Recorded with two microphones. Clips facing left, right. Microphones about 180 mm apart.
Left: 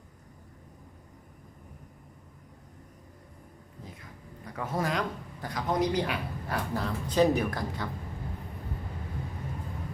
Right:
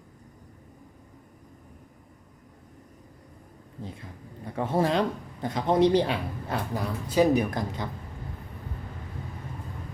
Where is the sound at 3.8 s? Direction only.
30° right (ahead or behind).